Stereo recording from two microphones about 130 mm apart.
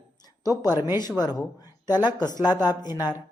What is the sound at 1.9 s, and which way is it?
Speech, 15° right (ahead or behind).